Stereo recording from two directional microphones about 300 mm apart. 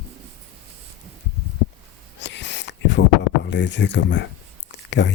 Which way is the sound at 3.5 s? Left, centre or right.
Left.